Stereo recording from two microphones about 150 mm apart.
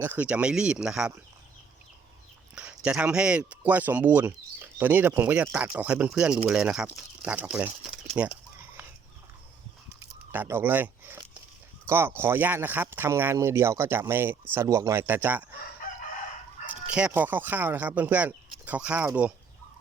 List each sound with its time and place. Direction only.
0.0 s speech: 10° right (ahead or behind)
2.6 s speech: 10° right (ahead or behind)
8.1 s a sound: 10° right (ahead or behind)
10.3 s speech: 15° right (ahead or behind)
16.9 s speech: 10° right (ahead or behind)